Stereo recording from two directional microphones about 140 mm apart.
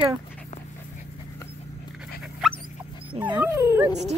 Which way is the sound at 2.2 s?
5° right (ahead or behind).